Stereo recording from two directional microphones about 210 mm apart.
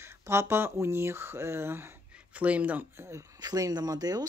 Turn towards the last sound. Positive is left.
turn(degrees=-20)  # may be behind; listen again after turning